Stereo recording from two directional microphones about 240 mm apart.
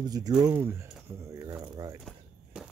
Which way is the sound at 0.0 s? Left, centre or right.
Centre.